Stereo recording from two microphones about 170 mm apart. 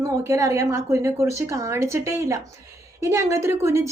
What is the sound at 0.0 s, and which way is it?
A woman's voice, 20° right (ahead or behind).